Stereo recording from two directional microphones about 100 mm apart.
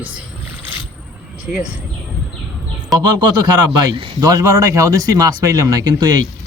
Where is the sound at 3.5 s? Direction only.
40° right (ahead or behind).